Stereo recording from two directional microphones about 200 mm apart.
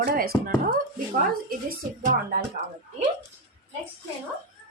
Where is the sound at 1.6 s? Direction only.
45° right (ahead or behind).